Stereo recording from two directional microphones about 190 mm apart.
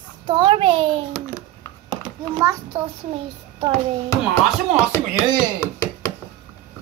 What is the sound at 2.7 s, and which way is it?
A child's voice, 30° right (ahead or behind).